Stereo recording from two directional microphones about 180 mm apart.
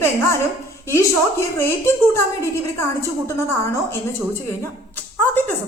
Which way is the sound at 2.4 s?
15° left (ahead or behind).